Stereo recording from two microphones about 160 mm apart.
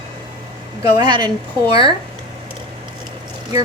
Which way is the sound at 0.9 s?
25° right (ahead or behind).